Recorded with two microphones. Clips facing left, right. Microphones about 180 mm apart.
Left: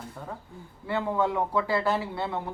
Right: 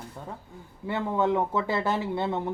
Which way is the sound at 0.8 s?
20° right (ahead or behind).